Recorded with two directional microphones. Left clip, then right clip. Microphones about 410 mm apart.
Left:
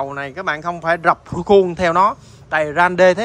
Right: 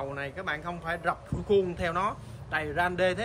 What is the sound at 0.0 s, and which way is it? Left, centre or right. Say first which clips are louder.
Speech: left 11 dB; centre.